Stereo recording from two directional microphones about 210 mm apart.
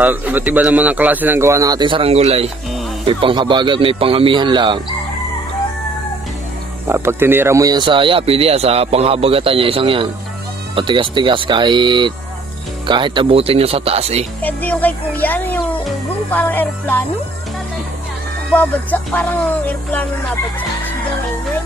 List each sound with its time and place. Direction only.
0.0 s a man's voice: 10° right (ahead or behind)
6.9 s speech: 10° right (ahead or behind); by 14.2 s 30° right (ahead or behind)
14.4 s music: 10° left (ahead or behind)
18.5 s music: 10° left (ahead or behind)